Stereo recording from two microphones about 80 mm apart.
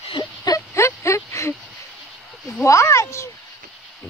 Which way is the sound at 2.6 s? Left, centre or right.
Left.